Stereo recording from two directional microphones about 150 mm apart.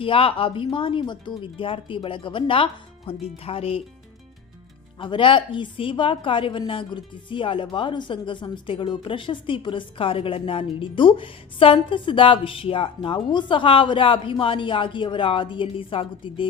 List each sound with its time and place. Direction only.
0.0 s a woman's voice: 35° left (ahead or behind)
4.9 s a woman's voice: 35° left (ahead or behind)